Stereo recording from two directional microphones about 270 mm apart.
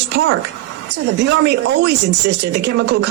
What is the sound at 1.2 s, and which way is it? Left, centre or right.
Speech, right.